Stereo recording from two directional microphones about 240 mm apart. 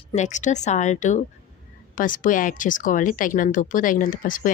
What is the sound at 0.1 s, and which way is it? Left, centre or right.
A woman's voice, left.